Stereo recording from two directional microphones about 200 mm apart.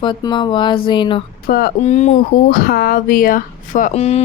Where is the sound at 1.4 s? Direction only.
45° left (ahead or behind).